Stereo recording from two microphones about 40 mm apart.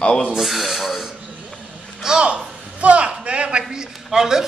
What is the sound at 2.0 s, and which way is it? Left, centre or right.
Speech, right.